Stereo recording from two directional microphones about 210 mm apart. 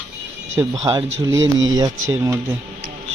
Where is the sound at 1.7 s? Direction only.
15° right (ahead or behind).